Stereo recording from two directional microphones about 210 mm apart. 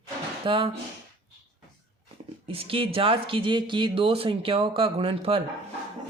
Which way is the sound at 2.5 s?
25° right (ahead or behind).